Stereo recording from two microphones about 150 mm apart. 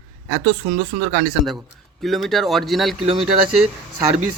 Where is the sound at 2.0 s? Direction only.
Centre (ahead or behind).